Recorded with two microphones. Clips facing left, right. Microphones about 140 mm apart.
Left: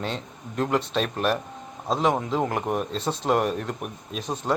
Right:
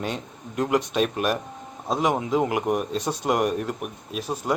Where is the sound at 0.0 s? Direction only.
10° right (ahead or behind).